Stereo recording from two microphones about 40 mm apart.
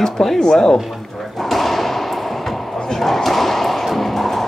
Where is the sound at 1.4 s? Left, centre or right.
Centre.